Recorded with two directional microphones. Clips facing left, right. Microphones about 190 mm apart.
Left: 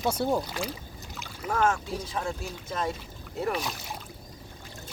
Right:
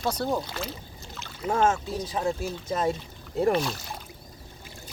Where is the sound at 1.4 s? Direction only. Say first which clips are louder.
Right 3 dB; 25° right (ahead or behind).